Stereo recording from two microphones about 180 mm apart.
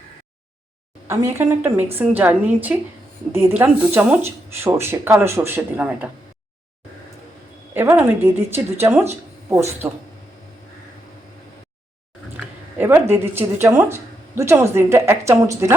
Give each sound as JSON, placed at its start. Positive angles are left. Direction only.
{"t": 1.0, "sound": "speech", "side_deg": -15}
{"t": 7.7, "sound": "speech", "side_deg": -10}
{"t": 12.7, "sound": "speech", "side_deg": -10}